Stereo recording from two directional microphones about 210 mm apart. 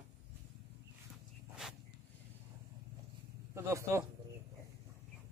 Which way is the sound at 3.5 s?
15° right (ahead or behind).